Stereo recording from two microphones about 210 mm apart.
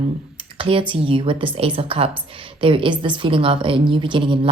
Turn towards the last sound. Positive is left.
turn(degrees=-25)  # may be behind; listen again after turning